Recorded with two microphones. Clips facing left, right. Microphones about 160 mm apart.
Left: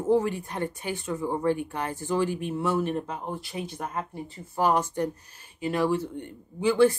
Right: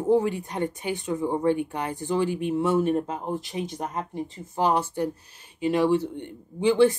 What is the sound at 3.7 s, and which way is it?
Speech, 20° right (ahead or behind).